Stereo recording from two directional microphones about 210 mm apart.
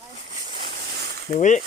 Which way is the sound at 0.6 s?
45° right (ahead or behind).